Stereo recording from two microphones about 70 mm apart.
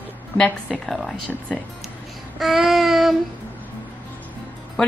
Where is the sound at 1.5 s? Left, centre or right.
Centre.